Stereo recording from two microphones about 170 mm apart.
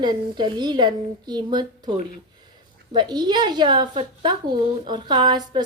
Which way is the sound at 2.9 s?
25° right (ahead or behind).